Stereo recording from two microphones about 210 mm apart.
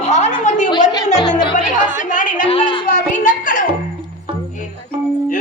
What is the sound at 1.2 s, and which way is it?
Music, 20° left (ahead or behind).